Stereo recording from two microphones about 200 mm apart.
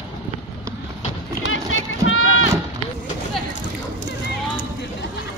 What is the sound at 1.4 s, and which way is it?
Run, 80° left.